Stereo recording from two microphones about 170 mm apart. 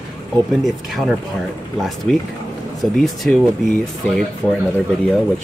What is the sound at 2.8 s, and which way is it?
Speech, centre (ahead or behind).